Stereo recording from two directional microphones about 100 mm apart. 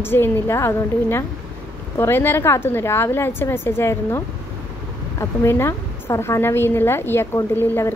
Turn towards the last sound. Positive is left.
turn(degrees=25)  # may be behind; listen again after turning